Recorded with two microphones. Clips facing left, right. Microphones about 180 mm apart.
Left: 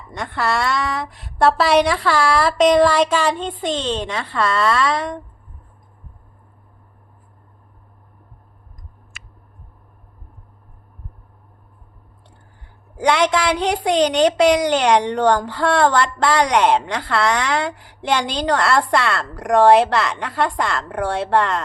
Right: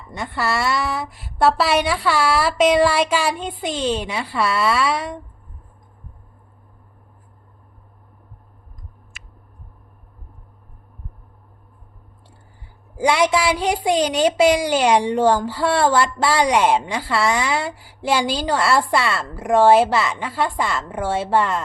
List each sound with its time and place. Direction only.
0.1 s a woman's voice: 5° right (ahead or behind)
13.0 s a woman's voice: 10° right (ahead or behind)